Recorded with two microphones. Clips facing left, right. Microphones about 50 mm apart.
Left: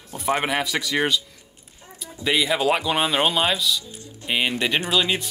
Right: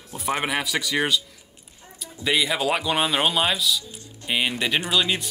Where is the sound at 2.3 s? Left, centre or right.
Centre.